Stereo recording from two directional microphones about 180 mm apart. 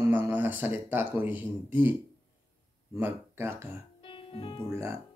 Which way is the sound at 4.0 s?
30° left (ahead or behind).